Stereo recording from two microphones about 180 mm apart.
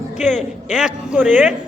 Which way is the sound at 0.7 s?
5° right (ahead or behind).